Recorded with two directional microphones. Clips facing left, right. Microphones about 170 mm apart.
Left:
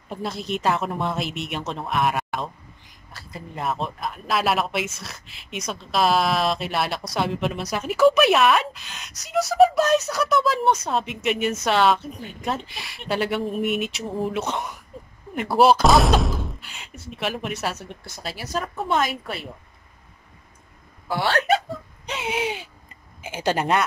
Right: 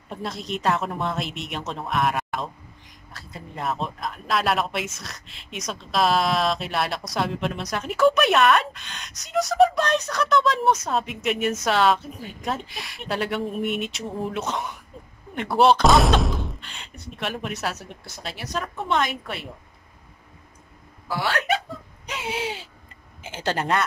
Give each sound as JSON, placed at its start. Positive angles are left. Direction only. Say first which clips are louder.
{"t": 0.1, "sound": "speech", "louder": "left 2 dB", "side_deg": 0}
{"t": 21.1, "sound": "speech", "louder": "left 3 dB", "side_deg": 30}
{"t": 22.3, "sound": "speech", "louder": "left 3 dB", "side_deg": 15}